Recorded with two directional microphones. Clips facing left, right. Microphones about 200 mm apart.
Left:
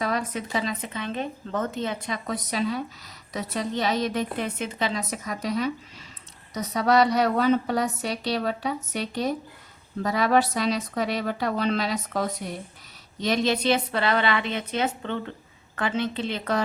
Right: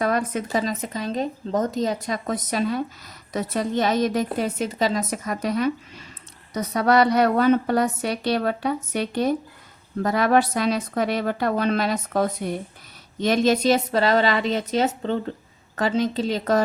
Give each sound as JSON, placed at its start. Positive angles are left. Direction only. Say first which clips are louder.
{"t": 0.0, "sound": "a woman's voice", "louder": "right 5 dB", "side_deg": -50}